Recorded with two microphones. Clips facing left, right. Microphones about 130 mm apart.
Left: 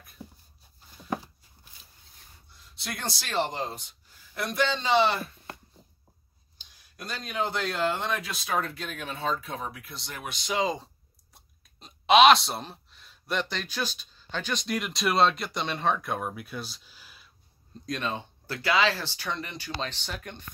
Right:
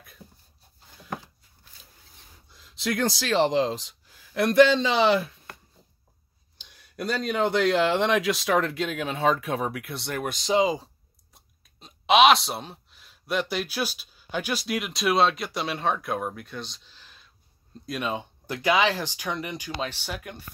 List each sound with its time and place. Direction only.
2.5 s speech: 90° right
6.6 s speech: 65° right (ahead or behind)
10.6 s speech: 5° right (ahead or behind)
17.8 s speech: 10° right (ahead or behind)